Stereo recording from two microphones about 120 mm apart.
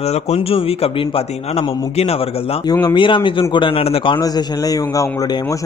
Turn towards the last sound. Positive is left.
turn(degrees=30)  # may be behind; listen again after turning